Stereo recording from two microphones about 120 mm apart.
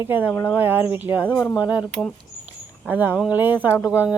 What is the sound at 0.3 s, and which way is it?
Speech, 20° left (ahead or behind).